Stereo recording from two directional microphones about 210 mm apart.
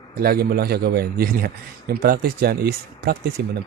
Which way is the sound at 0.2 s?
45° right (ahead or behind).